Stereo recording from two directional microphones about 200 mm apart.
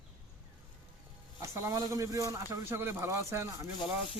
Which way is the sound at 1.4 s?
15° right (ahead or behind).